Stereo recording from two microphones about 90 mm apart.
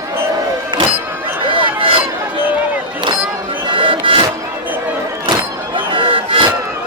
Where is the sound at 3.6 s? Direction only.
70° right (ahead or behind).